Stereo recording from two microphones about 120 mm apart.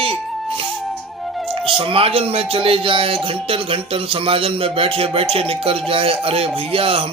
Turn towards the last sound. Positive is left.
turn(degrees=-50)  # may be behind; listen again after turning